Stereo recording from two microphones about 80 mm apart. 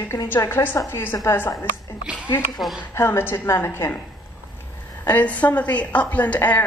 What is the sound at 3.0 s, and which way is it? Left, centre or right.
A woman's voice, left.